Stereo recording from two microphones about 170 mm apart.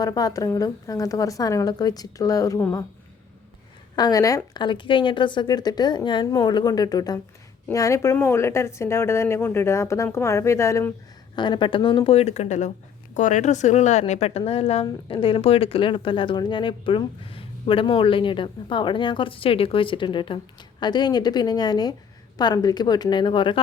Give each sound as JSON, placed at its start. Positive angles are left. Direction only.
{"t": 0.0, "sound": "speech", "side_deg": 20}
{"t": 3.9, "sound": "speech", "side_deg": 25}
{"t": 11.3, "sound": "a woman's voice", "side_deg": 25}